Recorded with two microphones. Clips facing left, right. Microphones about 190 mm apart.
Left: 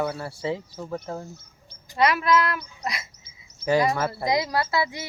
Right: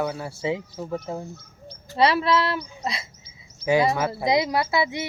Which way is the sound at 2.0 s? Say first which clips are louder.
Right 1 dB; 30° right (ahead or behind).